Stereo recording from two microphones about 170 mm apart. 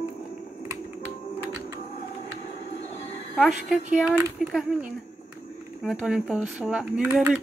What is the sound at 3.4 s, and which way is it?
Speech, 5° right (ahead or behind).